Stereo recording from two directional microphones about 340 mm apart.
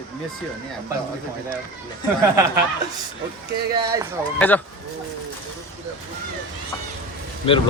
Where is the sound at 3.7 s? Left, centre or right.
Centre.